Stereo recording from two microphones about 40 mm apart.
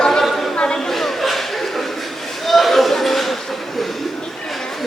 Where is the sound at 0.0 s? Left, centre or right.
Centre.